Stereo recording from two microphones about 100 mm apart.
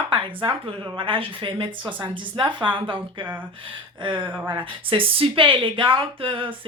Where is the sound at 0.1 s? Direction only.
60° right (ahead or behind).